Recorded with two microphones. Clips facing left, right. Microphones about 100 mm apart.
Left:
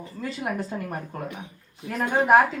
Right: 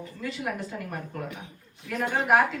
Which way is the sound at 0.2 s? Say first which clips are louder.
Left 3 dB; 35° left (ahead or behind).